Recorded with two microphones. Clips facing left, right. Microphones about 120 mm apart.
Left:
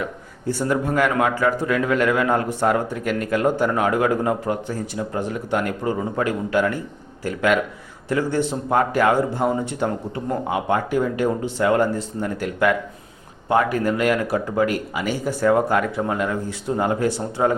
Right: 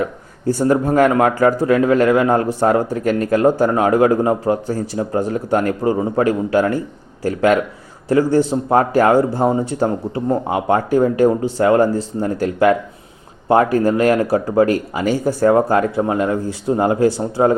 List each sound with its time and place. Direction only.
0.0 s speech: 40° right (ahead or behind)